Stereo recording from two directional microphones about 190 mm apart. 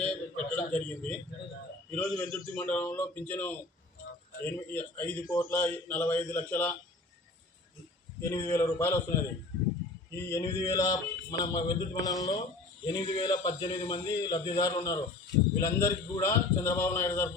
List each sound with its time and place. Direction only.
0.0 s a man's voice: 5° left (ahead or behind)
8.2 s a man's voice: 15° left (ahead or behind)